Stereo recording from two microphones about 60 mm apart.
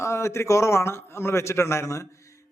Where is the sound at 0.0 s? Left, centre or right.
Left.